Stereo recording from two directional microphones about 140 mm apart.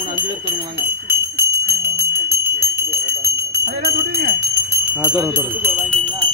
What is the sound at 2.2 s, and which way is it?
Bell, 90° right.